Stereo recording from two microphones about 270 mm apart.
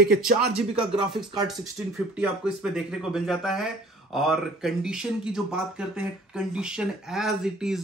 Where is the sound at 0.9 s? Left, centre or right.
Centre.